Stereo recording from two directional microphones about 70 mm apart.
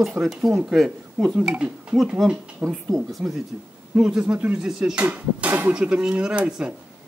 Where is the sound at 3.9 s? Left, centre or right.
Centre.